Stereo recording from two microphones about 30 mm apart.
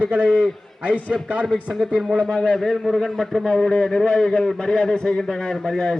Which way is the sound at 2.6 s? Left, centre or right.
Centre.